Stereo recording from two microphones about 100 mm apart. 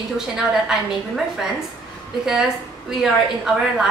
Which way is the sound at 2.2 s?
5° right (ahead or behind).